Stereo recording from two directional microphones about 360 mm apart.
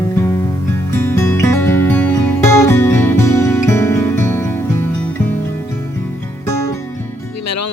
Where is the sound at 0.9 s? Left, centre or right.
Centre.